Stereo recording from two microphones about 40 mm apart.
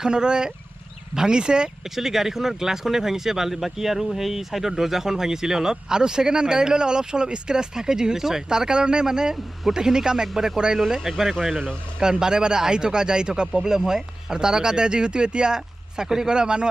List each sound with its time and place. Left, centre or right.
0.0 s speech: centre
2.0 s speech: centre
12.2 s speech: centre